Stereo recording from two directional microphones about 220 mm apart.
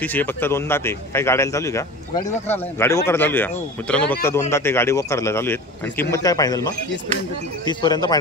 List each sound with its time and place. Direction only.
0.0 s a man's voice: 10° left (ahead or behind)